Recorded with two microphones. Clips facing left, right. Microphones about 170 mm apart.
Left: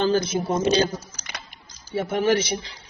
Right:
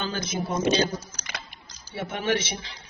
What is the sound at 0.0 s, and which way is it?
Speech, 35° left (ahead or behind).